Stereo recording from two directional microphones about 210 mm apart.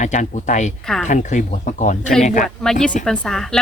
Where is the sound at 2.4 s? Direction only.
Centre (ahead or behind).